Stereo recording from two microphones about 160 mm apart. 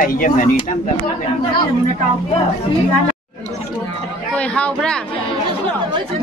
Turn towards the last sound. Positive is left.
turn(degrees=5)  # may be behind; listen again after turning